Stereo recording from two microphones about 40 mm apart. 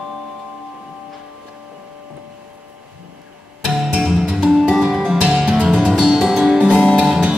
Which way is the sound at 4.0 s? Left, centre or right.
Centre.